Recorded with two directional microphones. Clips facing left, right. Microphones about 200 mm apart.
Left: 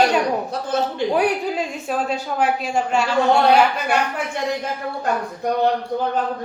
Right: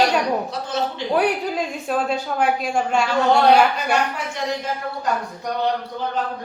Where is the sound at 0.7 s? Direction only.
55° left (ahead or behind).